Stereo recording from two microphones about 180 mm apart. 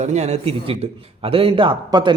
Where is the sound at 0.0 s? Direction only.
40° right (ahead or behind).